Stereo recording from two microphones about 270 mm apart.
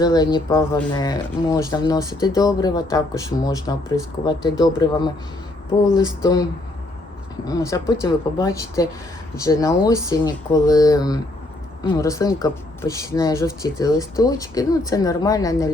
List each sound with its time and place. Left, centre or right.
0.0 s speech: centre
6.2 s speech: centre